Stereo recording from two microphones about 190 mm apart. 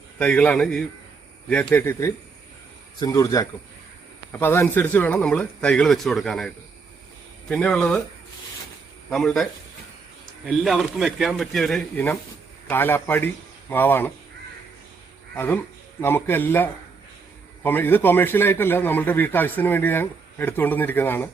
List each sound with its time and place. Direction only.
0.2 s a man's voice: 5° left (ahead or behind)
7.5 s speech: 5° left (ahead or behind)
9.0 s a man's voice: 5° left (ahead or behind)
15.4 s a man's voice: 10° left (ahead or behind)